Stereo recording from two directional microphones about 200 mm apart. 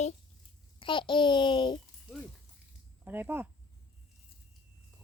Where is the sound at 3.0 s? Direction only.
10° right (ahead or behind).